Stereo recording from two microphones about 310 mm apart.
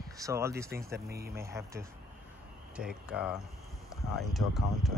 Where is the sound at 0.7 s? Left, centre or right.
Right.